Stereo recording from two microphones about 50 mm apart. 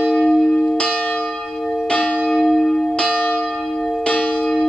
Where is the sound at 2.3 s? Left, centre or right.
Centre.